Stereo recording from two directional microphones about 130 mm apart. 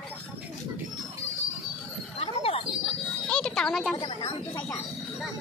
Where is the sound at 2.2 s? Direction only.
50° left (ahead or behind).